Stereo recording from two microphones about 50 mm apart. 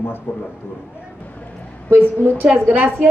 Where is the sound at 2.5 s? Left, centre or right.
Right.